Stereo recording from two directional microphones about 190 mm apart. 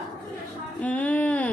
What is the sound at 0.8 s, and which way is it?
Child singing, 5° left (ahead or behind).